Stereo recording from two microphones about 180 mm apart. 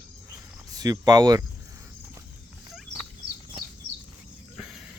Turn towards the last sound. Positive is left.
turn(degrees=0)  # may be behind; listen again after turning